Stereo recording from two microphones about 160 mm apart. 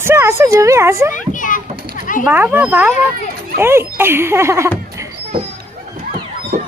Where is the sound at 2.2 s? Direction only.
10° right (ahead or behind).